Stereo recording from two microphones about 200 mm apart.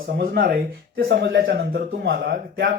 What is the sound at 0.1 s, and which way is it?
Speech, 45° right (ahead or behind).